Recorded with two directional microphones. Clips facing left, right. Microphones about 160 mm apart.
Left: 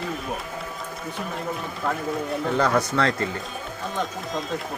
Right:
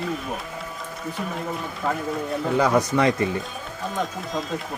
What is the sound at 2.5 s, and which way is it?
Speech, 10° right (ahead or behind).